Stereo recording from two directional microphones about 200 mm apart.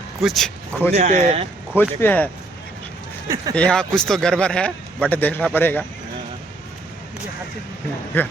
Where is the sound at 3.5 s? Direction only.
5° left (ahead or behind).